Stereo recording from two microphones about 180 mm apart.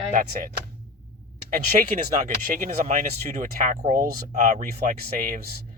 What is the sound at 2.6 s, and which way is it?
Speech, 45° right (ahead or behind).